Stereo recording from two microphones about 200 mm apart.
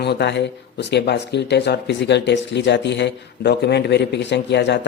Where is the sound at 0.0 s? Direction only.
55° left (ahead or behind).